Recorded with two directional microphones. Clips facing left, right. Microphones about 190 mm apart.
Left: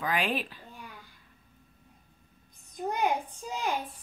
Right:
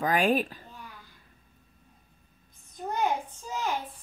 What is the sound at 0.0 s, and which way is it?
Speech, 45° right (ahead or behind).